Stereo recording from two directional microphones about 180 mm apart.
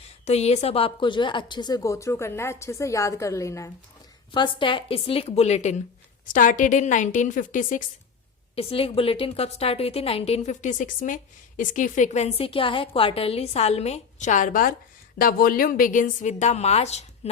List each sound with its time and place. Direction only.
0.3 s a woman's voice: 35° left (ahead or behind); by 3.7 s 15° left (ahead or behind)
4.4 s a woman's voice: 30° left (ahead or behind); by 7.9 s 45° left (ahead or behind)
8.5 s a woman's voice: 30° left (ahead or behind)